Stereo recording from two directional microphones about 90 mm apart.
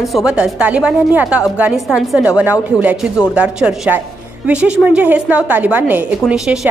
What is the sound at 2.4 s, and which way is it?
A woman's voice, 15° right (ahead or behind).